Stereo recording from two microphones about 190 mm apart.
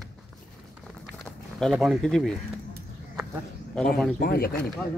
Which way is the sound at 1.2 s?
Centre (ahead or behind).